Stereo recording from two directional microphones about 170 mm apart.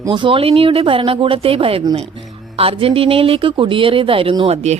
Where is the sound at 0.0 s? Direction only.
30° right (ahead or behind).